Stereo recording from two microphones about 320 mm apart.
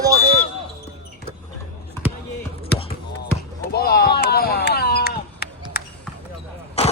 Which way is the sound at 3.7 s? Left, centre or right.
Left.